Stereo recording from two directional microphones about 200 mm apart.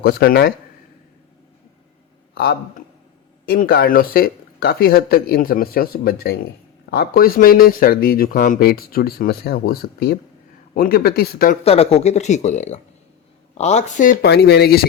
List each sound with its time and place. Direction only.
0.0 s speech: 50° left (ahead or behind)
2.3 s a man's voice: 55° left (ahead or behind)
11.6 s speech: 30° left (ahead or behind); by 14.8 s 55° left (ahead or behind)